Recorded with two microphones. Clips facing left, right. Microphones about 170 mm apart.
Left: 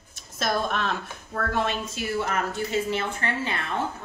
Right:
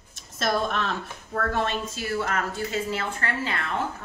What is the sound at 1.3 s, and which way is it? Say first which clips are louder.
A woman's voice: even; 15° left (ahead or behind).